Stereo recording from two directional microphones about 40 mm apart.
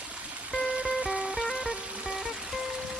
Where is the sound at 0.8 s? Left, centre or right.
Right.